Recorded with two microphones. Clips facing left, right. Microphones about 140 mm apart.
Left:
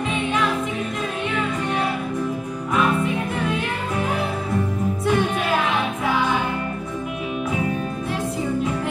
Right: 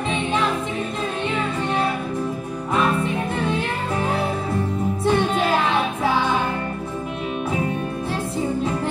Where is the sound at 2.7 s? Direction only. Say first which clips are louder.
Even; 30° right (ahead or behind).